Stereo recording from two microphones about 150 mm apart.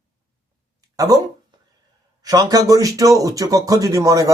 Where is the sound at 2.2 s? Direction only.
25° right (ahead or behind).